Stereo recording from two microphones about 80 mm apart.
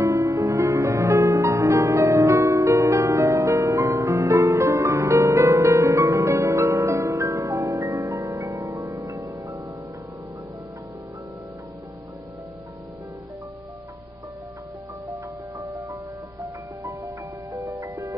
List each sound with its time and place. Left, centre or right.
0.0 s music: right
15.6 s music: right